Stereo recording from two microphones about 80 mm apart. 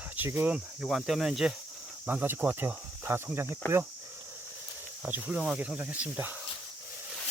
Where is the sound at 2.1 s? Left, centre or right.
Right.